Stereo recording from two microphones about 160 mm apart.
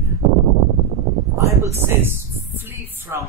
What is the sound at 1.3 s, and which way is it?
A woman's voice, 20° right (ahead or behind).